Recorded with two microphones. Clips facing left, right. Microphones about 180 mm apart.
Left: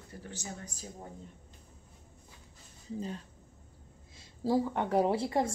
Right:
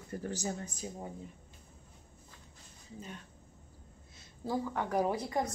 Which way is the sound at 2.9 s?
30° left (ahead or behind).